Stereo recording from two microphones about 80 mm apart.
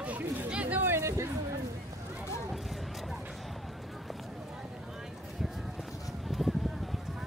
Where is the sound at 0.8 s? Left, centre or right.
Right.